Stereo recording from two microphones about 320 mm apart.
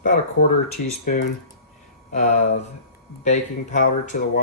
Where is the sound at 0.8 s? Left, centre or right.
Left.